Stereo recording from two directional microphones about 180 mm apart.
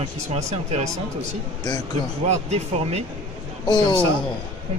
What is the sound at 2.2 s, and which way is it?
Speech, 35° right (ahead or behind).